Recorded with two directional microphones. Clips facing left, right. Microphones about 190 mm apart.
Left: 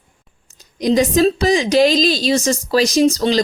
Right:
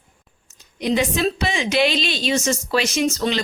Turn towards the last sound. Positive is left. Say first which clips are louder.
# left 7 dB
turn(degrees=35)  # may be behind; listen again after turning